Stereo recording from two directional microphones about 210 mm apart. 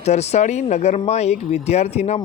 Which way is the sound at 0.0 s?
30° left (ahead or behind).